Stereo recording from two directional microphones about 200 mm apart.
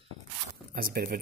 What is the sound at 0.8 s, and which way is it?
Speech, 50° right (ahead or behind).